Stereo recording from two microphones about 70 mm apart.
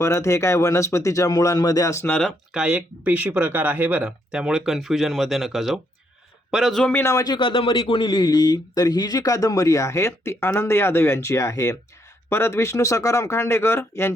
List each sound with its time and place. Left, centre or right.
0.0 s speech: left
2.5 s speech: centre
3.0 s speech: right
4.0 s speech: centre
7.0 s speech: left
8.0 s speech: left
12.3 s speech: left